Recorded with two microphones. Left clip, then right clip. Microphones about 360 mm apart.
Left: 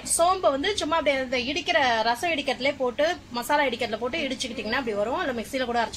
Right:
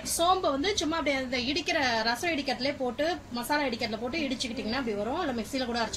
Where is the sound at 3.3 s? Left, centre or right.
Left.